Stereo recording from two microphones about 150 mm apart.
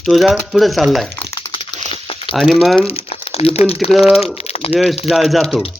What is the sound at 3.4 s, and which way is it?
Speech, 40° left (ahead or behind).